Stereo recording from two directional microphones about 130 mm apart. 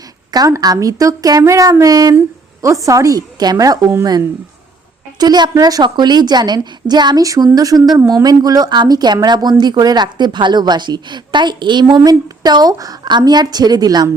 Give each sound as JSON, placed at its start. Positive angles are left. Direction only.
{"t": 0.3, "sound": "speech", "side_deg": -30}
{"t": 5.2, "sound": "a woman's voice", "side_deg": -30}